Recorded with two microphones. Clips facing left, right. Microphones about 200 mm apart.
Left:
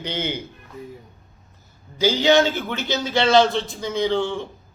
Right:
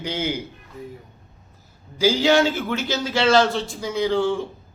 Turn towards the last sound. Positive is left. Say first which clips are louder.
# right 1 dB
turn(degrees=-5)  # may be behind; listen again after turning